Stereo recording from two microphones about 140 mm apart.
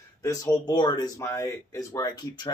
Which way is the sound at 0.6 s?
30° left (ahead or behind).